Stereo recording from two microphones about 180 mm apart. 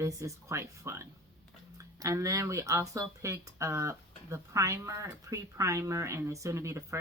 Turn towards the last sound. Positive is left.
turn(degrees=-15)  # may be behind; listen again after turning